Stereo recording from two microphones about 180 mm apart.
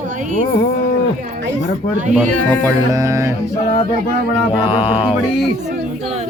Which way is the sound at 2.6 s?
20° right (ahead or behind).